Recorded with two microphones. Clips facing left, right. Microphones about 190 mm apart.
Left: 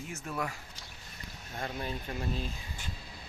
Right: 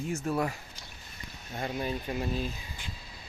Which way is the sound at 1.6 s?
10° right (ahead or behind).